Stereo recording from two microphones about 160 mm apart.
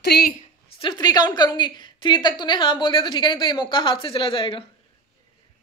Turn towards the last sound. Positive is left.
turn(degrees=35)  # may be behind; listen again after turning